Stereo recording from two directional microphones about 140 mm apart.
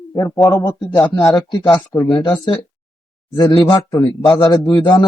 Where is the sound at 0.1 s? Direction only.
25° left (ahead or behind).